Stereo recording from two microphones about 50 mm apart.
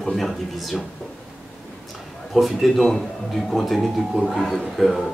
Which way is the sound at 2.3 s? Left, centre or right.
Centre.